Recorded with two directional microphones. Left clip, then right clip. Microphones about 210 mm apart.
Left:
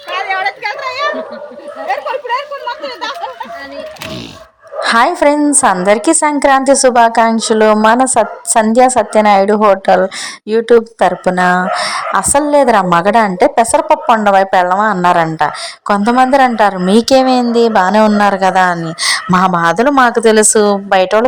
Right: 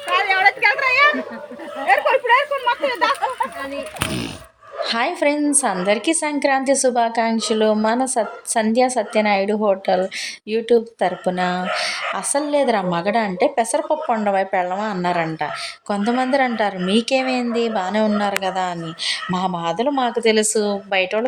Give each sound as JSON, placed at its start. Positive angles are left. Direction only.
{"t": 0.1, "sound": "a sound", "side_deg": -45}
{"t": 1.9, "sound": "speech", "side_deg": -40}
{"t": 4.8, "sound": "a woman's voice", "side_deg": 25}